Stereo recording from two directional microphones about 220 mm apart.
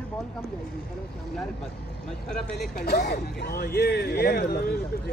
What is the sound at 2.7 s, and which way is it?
Speech, 45° left (ahead or behind).